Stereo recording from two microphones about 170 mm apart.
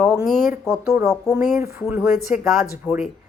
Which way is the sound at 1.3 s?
5° right (ahead or behind).